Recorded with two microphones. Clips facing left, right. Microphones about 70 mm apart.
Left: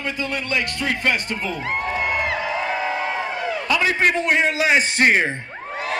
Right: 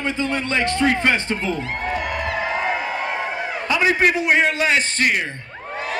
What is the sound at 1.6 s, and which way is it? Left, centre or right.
Music, centre.